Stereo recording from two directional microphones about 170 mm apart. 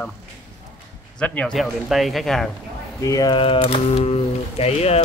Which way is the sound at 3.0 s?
20° left (ahead or behind).